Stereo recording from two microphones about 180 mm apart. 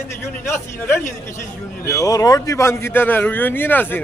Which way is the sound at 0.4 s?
15° left (ahead or behind).